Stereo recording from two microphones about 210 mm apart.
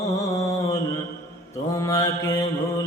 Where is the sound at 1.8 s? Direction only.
15° left (ahead or behind).